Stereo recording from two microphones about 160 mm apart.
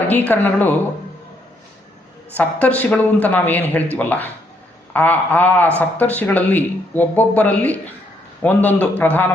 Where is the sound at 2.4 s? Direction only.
10° left (ahead or behind).